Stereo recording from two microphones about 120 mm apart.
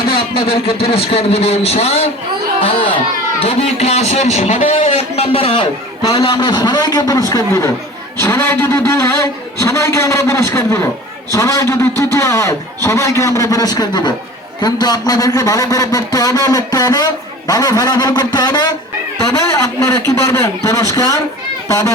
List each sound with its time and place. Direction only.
0.4 s a man's voice: 55° left (ahead or behind)
3.4 s a man's voice: 60° left (ahead or behind)
6.0 s a man's voice: 30° left (ahead or behind)
6.2 s a man's voice: 45° left (ahead or behind)
19.5 s a man's voice: 25° left (ahead or behind)